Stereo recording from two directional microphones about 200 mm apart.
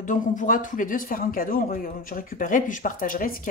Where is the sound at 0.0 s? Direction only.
40° left (ahead or behind).